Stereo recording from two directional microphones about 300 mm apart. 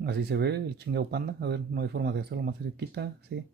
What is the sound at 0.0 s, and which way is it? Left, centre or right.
Speech, right.